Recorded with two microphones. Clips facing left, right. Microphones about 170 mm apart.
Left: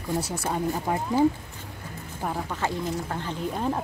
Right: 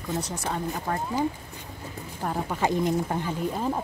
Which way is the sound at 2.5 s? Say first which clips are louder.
Right 4 dB; 15° right (ahead or behind).